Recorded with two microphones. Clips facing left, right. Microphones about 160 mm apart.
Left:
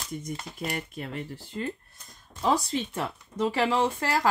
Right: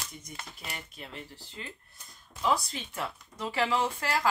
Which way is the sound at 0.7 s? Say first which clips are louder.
Left 9 dB; 50° left (ahead or behind).